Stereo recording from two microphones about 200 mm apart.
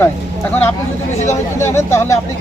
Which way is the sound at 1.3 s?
15° left (ahead or behind).